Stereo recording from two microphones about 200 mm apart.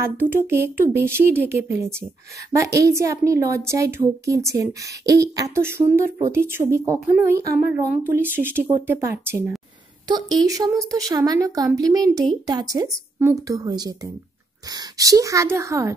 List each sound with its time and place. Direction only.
0.0 s speech: 10° right (ahead or behind)